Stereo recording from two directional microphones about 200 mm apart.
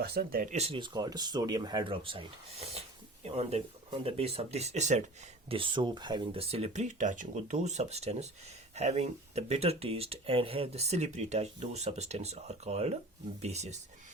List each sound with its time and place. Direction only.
0.0 s speech: 50° right (ahead or behind)
0.5 s speech: 30° right (ahead or behind)